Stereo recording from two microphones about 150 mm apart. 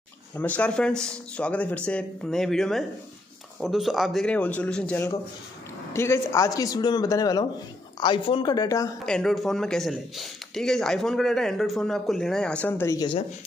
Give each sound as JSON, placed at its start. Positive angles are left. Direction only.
{"t": 0.6, "sound": "speech", "side_deg": 5}
{"t": 5.9, "sound": "a man's voice", "side_deg": 20}
{"t": 9.0, "sound": "speech", "side_deg": 5}